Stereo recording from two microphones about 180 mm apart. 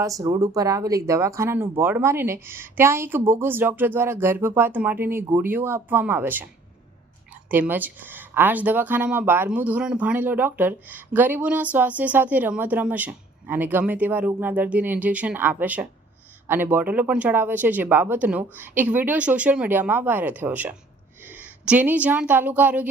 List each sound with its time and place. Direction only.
0.0 s a woman's voice: 20° right (ahead or behind)